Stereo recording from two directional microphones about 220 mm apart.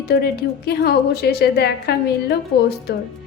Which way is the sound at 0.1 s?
45° left (ahead or behind).